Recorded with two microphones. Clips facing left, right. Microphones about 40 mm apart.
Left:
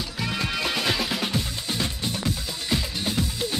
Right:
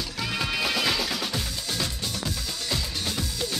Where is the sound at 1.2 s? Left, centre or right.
Left.